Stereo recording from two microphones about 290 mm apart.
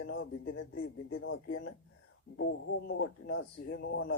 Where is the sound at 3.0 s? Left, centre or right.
Left.